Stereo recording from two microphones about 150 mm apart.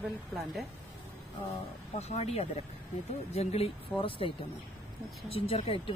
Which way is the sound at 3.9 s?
35° left (ahead or behind).